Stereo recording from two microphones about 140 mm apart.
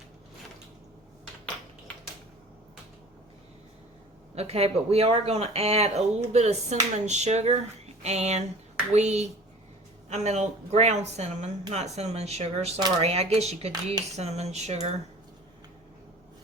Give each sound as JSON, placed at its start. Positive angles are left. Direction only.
{"t": 4.4, "sound": "speech", "side_deg": -45}